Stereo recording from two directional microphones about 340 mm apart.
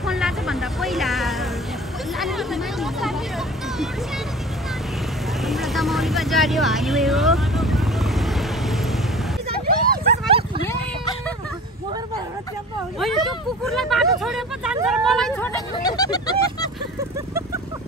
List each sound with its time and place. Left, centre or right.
0.0 s music: centre
2.1 s speech: centre
5.4 s vehicle: centre
9.7 s dog: right
10.7 s a sound: centre
13.0 s speech: centre